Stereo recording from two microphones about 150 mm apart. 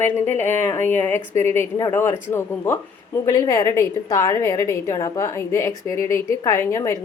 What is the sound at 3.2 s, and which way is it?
A woman's voice, 20° left (ahead or behind).